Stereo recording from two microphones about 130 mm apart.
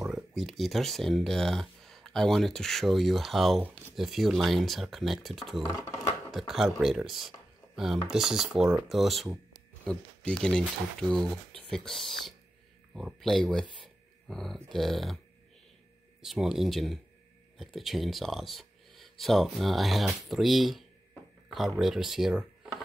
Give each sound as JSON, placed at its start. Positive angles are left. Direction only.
{"t": 0.0, "sound": "speech", "side_deg": 0}
{"t": 5.7, "sound": "speech", "side_deg": 30}
{"t": 6.3, "sound": "speech", "side_deg": 0}
{"t": 16.2, "sound": "speech", "side_deg": -5}